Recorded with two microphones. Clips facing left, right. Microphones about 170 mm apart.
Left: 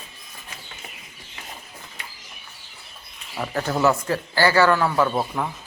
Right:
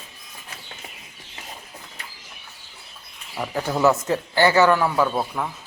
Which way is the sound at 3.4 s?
10° right (ahead or behind).